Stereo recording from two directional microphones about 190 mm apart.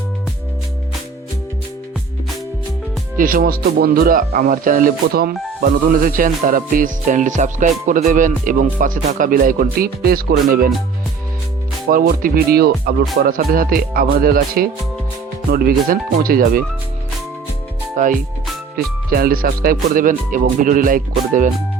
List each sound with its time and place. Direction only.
3.2 s speech: 50° right (ahead or behind)
11.9 s speech: 50° right (ahead or behind)
17.9 s speech: 45° right (ahead or behind)